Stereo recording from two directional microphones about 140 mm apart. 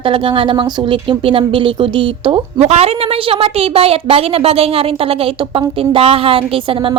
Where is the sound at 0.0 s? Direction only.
40° right (ahead or behind).